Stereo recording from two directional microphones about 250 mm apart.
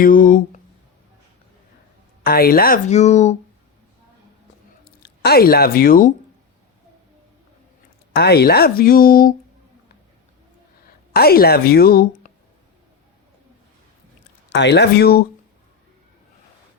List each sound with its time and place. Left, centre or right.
0.0 s speech: left
2.2 s speech: left
4.9 s speech: left
8.1 s speech: left
11.1 s speech: left
14.5 s speech: left